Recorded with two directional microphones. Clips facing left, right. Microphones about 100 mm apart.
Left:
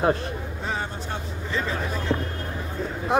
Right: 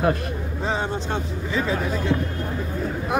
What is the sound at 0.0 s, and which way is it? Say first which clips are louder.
Speech: even; 30° left (ahead or behind).